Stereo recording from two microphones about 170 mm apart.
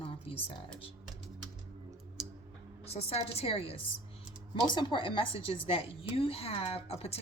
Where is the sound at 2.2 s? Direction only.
Centre (ahead or behind).